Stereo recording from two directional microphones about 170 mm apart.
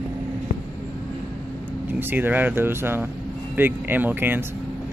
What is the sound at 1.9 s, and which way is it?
Speech, 10° right (ahead or behind).